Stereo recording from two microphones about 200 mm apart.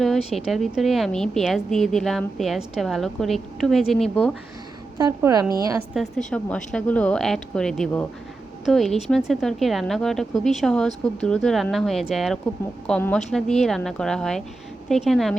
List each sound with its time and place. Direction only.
0.3 s a woman's voice: centre (ahead or behind)
5.0 s a woman's voice: 15° right (ahead or behind)
5.9 s a woman's voice: centre (ahead or behind)